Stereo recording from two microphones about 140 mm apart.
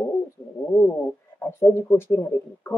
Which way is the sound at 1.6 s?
15° left (ahead or behind).